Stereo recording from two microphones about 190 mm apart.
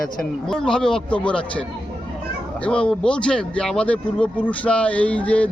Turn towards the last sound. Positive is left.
turn(degrees=5)  # may be behind; listen again after turning